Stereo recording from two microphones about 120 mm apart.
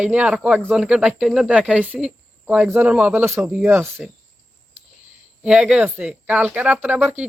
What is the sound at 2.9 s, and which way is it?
Speech, 5° right (ahead or behind).